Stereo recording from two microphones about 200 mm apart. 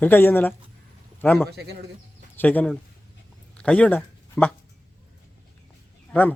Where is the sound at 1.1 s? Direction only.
10° left (ahead or behind).